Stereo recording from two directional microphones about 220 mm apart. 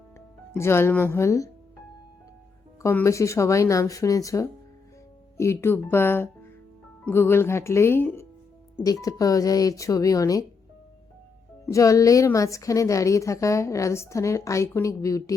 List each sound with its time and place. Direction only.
0.5 s a woman's voice: 10° left (ahead or behind)
2.8 s a woman's voice: 15° left (ahead or behind)
11.6 s a woman's voice: 15° left (ahead or behind)